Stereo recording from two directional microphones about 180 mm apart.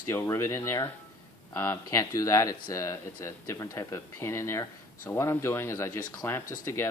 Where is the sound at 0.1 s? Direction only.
15° left (ahead or behind).